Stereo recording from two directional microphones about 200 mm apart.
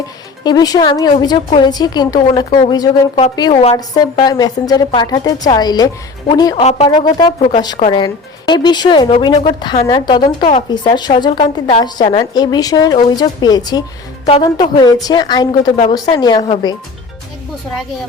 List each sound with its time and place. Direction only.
0.4 s a woman's voice: 20° left (ahead or behind)
3.8 s a woman's voice: 20° left (ahead or behind)
6.6 s speech: 30° left (ahead or behind)
6.9 s a woman's voice: 20° left (ahead or behind)
7.3 s a woman's voice: 30° left (ahead or behind)